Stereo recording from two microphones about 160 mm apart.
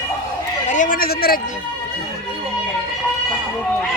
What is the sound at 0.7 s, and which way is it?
Speech, 55° left (ahead or behind).